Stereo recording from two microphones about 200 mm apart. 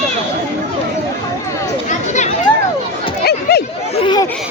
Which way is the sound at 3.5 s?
55° left (ahead or behind).